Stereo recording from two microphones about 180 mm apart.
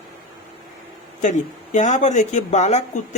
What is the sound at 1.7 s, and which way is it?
Speech, 40° left (ahead or behind).